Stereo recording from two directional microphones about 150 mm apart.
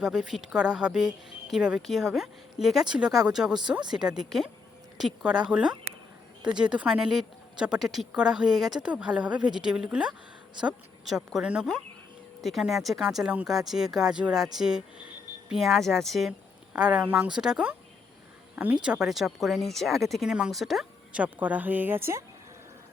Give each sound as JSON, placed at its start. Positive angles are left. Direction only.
{"t": 0.0, "sound": "speech", "side_deg": -5}